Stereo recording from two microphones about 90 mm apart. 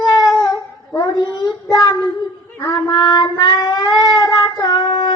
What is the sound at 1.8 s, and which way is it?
Child singing, 45° left (ahead or behind).